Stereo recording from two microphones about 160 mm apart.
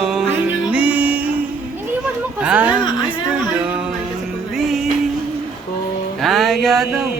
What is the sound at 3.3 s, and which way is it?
Music, 10° right (ahead or behind).